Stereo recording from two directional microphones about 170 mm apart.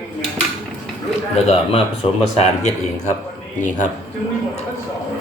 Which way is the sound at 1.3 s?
40° left (ahead or behind).